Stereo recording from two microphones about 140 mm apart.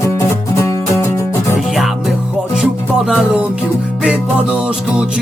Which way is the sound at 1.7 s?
Centre (ahead or behind).